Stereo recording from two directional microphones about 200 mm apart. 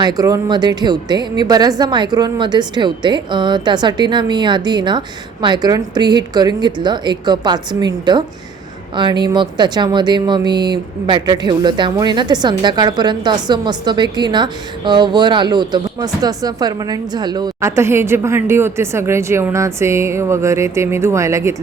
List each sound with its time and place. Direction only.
0.0 s speech: 20° right (ahead or behind)